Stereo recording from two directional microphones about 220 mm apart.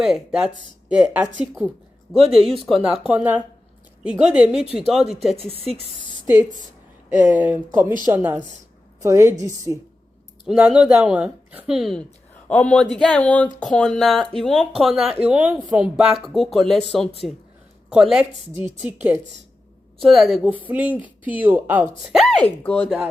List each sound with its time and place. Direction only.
0.0 s a woman's voice: 5° right (ahead or behind)
5.5 s speech: 25° right (ahead or behind)
7.1 s a woman's voice: 10° right (ahead or behind)
10.4 s a woman's voice: 5° right (ahead or behind)